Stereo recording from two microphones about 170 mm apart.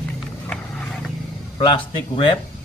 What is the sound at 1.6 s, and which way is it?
Speech, 30° left (ahead or behind).